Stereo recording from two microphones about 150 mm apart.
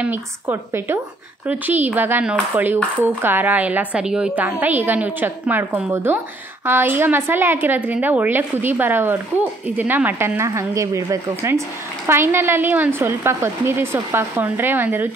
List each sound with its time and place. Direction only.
0.0 s a woman's voice: 15° right (ahead or behind)